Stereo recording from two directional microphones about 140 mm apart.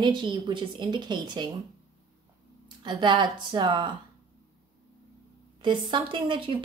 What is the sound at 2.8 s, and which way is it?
A woman's voice, 35° right (ahead or behind).